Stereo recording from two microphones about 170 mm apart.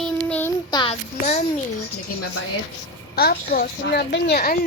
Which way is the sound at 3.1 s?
65° left (ahead or behind).